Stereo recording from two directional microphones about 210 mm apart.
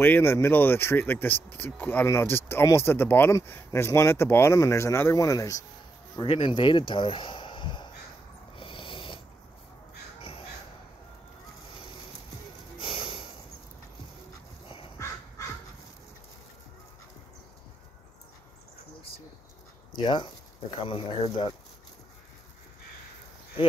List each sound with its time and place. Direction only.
0.0 s speech: 10° left (ahead or behind)
8.5 s a sound: 25° left (ahead or behind)
12.7 s snort: 25° left (ahead or behind)
15.0 s crow: 15° left (ahead or behind)
20.0 s speech: 20° left (ahead or behind)